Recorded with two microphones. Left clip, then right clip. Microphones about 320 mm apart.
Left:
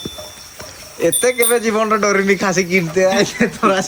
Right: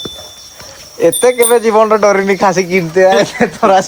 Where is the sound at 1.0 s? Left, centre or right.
Right.